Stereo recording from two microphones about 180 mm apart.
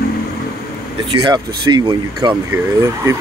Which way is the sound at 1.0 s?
25° right (ahead or behind).